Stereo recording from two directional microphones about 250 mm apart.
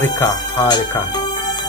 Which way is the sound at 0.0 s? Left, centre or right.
Centre.